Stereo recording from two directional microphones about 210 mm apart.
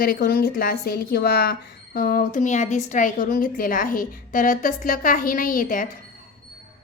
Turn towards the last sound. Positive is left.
turn(degrees=40)  # may be behind; listen again after turning